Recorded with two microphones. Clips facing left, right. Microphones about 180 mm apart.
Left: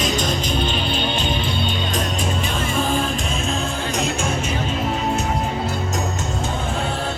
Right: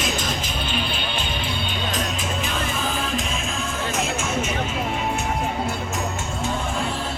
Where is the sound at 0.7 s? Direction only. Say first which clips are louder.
Left 4 dB; 10° right (ahead or behind).